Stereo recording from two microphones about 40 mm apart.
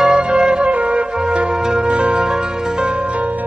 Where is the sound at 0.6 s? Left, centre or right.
Right.